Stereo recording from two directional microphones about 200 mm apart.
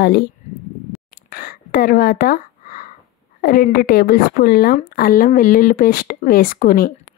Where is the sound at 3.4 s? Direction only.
50° left (ahead or behind).